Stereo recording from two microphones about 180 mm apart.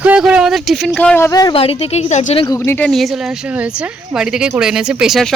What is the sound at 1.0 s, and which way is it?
A woman's voice, 10° left (ahead or behind).